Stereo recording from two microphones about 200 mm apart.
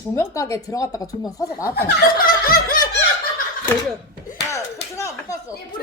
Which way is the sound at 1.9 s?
45° left (ahead or behind).